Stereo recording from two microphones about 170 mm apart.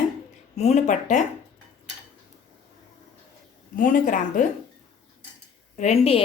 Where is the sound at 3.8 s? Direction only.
50° left (ahead or behind).